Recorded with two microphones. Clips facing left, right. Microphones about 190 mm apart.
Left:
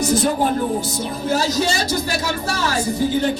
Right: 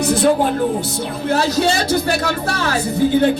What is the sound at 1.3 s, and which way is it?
Speech, 60° right (ahead or behind).